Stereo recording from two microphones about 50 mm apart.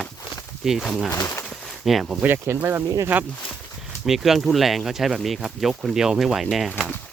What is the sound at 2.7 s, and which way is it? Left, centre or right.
Speech, right.